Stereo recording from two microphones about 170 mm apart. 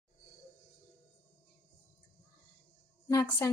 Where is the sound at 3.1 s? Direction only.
20° left (ahead or behind).